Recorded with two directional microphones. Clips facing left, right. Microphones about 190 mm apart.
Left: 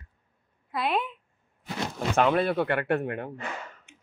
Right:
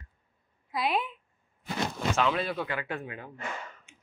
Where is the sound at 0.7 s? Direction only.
Centre (ahead or behind).